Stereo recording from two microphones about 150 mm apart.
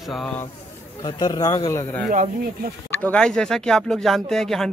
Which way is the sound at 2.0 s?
60° right (ahead or behind).